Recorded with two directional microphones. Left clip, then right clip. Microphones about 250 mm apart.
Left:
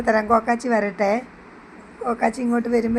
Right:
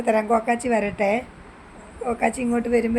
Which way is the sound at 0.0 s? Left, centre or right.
Right.